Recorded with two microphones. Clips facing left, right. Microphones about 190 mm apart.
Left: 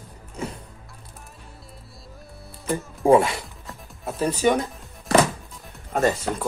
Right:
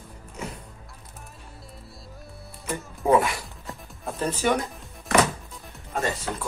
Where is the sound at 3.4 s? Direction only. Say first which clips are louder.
Even; centre (ahead or behind).